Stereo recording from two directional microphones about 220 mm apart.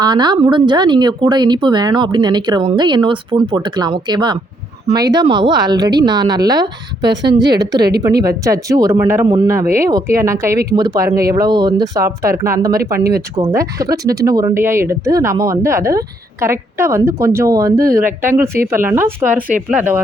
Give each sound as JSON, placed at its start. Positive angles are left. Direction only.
{"t": 0.0, "sound": "a woman's voice", "side_deg": -20}